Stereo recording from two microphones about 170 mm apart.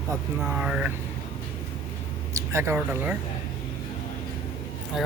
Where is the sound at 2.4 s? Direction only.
15° right (ahead or behind).